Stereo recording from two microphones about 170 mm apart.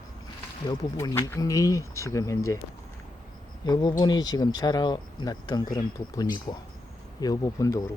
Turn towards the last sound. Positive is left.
turn(degrees=20)  # may be behind; listen again after turning